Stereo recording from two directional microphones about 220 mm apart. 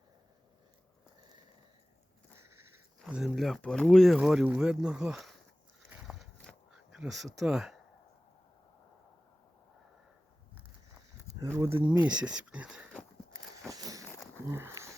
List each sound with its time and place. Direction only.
3.0 s speech: centre (ahead or behind)
6.0 s a sound: centre (ahead or behind)
7.3 s speech: centre (ahead or behind)
11.5 s speech: 10° right (ahead or behind)
13.7 s walk: 15° right (ahead or behind)
14.0 s a sound: 10° left (ahead or behind)
14.4 s speech: 10° right (ahead or behind)